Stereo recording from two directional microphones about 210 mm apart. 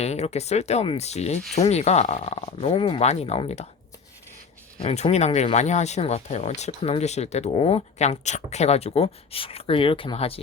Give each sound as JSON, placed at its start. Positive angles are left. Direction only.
{"t": 0.0, "sound": "speech", "side_deg": 30}
{"t": 4.8, "sound": "speech", "side_deg": 30}